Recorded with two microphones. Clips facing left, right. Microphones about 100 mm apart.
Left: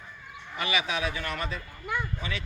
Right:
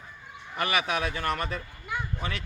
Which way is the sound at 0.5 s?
50° right (ahead or behind).